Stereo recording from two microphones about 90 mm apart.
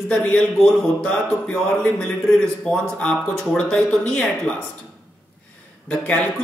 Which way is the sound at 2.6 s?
10° left (ahead or behind).